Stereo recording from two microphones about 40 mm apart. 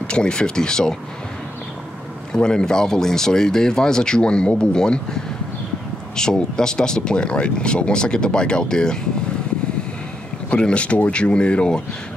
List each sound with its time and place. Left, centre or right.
0.1 s speech: left
2.3 s speech: centre
10.5 s speech: left